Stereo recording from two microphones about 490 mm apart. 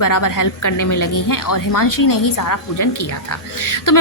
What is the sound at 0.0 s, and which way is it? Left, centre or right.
A woman's voice, left.